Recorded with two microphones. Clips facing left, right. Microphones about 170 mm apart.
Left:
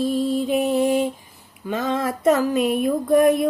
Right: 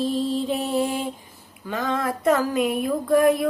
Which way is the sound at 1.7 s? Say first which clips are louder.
Left 2 dB; 20° left (ahead or behind).